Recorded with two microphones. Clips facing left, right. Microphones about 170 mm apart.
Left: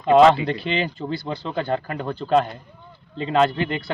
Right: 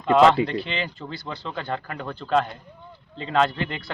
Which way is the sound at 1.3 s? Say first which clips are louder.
Left 4 dB; 10° left (ahead or behind).